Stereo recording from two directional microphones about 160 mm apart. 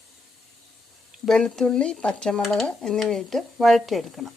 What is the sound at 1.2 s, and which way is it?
Speech, 5° left (ahead or behind).